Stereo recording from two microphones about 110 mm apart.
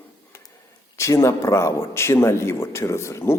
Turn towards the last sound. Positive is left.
turn(degrees=25)  # may be behind; listen again after turning